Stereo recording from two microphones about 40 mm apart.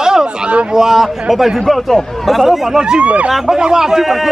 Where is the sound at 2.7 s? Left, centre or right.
Right.